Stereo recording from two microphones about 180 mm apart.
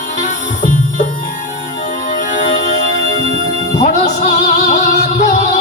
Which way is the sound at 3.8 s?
45° left (ahead or behind).